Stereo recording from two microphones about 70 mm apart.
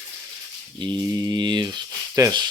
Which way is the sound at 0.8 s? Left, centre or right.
Right.